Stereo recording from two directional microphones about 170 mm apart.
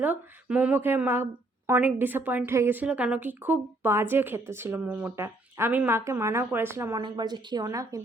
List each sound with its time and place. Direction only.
0.0 s a woman's voice: 10° right (ahead or behind)
7.0 s speech: 25° right (ahead or behind)